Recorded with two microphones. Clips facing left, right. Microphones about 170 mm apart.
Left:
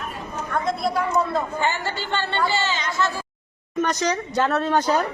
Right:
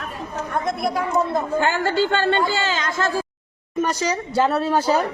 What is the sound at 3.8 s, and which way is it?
Speech, 10° right (ahead or behind).